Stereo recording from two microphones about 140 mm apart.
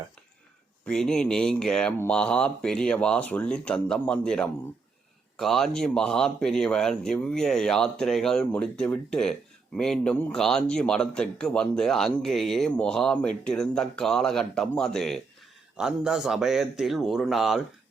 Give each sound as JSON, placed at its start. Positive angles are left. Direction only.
{"t": 0.9, "sound": "a man's voice", "side_deg": 5}